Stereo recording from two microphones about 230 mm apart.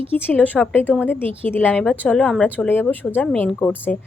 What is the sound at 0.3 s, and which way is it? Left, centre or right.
A woman's voice, centre.